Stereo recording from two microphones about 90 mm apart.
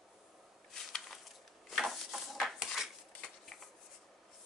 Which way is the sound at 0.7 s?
5° left (ahead or behind).